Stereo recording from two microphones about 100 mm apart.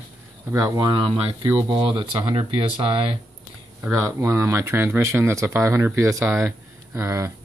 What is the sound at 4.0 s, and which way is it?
Speech, 30° right (ahead or behind).